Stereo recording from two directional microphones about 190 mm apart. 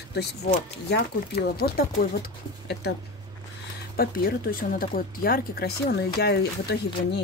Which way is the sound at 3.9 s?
50° left (ahead or behind).